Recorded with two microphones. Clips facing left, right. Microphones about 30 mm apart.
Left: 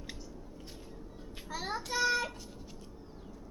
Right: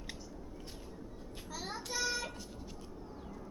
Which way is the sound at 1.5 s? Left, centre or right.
Left.